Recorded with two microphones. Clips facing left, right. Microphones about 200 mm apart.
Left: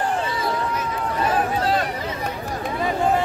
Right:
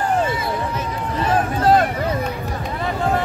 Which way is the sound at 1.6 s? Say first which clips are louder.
Right 7 dB; 45° right (ahead or behind).